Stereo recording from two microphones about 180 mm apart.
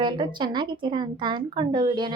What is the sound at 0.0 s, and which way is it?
A woman's voice, 25° right (ahead or behind).